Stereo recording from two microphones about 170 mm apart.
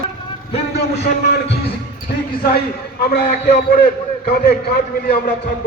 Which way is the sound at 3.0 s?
65° left (ahead or behind).